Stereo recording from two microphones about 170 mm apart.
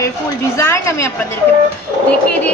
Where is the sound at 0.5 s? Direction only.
15° left (ahead or behind).